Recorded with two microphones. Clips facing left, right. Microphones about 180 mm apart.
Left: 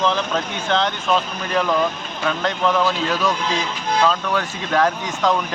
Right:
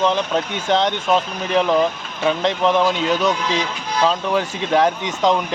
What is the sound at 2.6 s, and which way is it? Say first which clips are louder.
Speech: right 2 dB; 25° right (ahead or behind).